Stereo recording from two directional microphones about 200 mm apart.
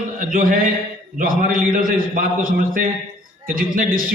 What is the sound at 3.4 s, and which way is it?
Speech, 45° right (ahead or behind).